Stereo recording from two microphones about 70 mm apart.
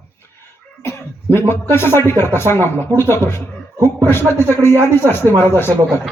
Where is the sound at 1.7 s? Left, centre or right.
Left.